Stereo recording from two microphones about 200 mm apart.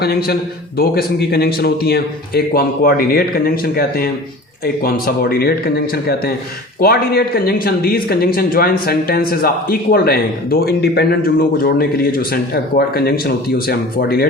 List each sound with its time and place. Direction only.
0.0 s speech: 50° left (ahead or behind)